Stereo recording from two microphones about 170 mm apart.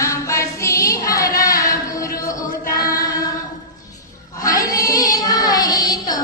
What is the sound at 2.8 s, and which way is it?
Singing, 20° left (ahead or behind).